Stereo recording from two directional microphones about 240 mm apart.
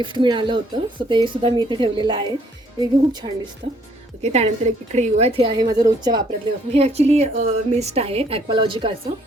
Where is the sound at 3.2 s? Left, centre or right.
Right.